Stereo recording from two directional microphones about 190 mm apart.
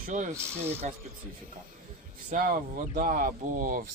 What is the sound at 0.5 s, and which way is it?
Speech, 10° right (ahead or behind).